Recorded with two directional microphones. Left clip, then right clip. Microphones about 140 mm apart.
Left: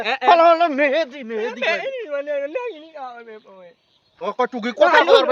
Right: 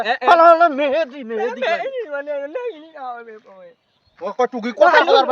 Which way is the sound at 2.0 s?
20° left (ahead or behind).